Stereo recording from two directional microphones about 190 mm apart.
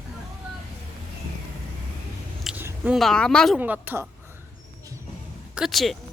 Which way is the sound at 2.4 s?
5° right (ahead or behind).